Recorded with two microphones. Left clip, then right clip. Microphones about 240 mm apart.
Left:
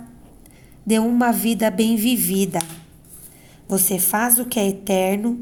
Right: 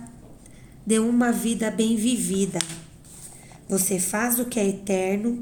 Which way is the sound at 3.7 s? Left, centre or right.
Left.